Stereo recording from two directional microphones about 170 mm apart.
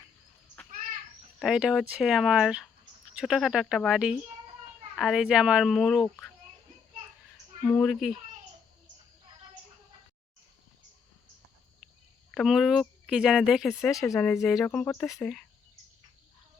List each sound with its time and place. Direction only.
1.4 s speech: 5° right (ahead or behind)
7.8 s speech: centre (ahead or behind)
12.3 s speech: centre (ahead or behind)
13.9 s speech: 20° left (ahead or behind)
14.4 s speech: centre (ahead or behind)